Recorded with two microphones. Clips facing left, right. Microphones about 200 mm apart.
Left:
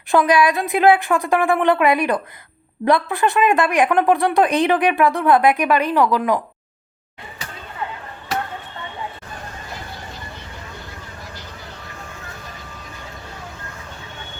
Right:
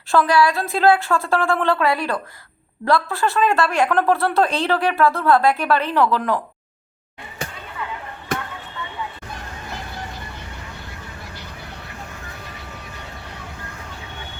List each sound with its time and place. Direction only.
0.1 s speech: 20° left (ahead or behind)